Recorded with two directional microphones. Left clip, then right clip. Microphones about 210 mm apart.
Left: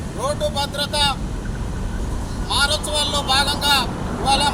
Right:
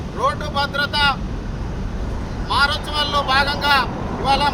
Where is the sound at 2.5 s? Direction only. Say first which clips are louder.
Right 1 dB; 10° left (ahead or behind).